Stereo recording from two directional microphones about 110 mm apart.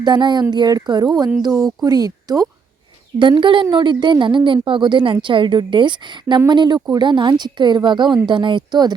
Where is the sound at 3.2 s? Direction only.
45° right (ahead or behind).